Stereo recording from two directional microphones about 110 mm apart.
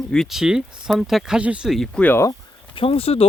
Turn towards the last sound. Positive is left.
turn(degrees=60)  # may be behind; listen again after turning